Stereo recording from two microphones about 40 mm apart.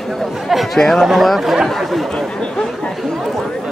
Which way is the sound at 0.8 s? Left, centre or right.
Centre.